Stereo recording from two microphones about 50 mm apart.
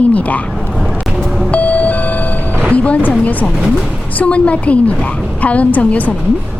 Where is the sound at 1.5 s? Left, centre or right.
Left.